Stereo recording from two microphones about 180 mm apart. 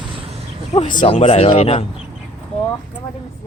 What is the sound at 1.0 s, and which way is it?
Speech, 30° left (ahead or behind).